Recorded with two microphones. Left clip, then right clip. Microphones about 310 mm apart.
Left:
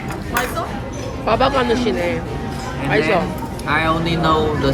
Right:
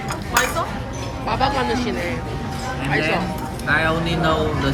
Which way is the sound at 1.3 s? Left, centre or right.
Centre.